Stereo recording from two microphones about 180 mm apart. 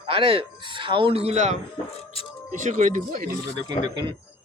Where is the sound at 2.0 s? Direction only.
30° left (ahead or behind).